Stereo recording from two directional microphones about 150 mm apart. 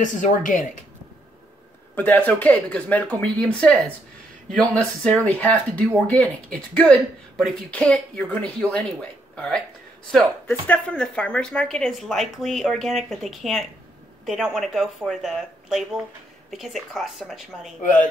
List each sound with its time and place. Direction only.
0.0 s speech: 55° left (ahead or behind)
2.0 s speech: 10° left (ahead or behind)
10.7 s a woman's voice: 10° left (ahead or behind)